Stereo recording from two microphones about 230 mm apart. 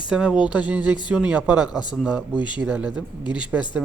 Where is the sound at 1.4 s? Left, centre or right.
Centre.